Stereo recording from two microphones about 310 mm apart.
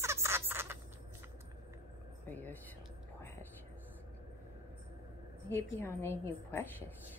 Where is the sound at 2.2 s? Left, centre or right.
Centre.